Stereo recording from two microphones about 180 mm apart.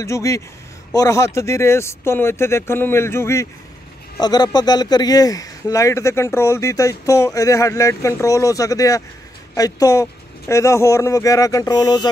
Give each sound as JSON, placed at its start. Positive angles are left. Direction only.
{"t": 0.0, "sound": "speech", "side_deg": 15}